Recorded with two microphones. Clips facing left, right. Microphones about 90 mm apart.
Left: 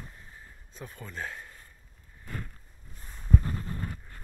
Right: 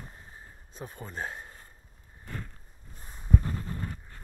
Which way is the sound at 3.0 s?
15° right (ahead or behind).